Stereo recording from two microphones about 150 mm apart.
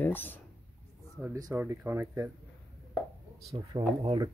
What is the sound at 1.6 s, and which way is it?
Speech, 15° right (ahead or behind).